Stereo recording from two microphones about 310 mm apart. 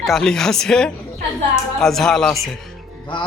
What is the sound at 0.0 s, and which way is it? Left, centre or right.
Speech, centre.